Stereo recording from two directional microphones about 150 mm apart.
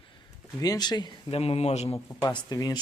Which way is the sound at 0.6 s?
25° left (ahead or behind).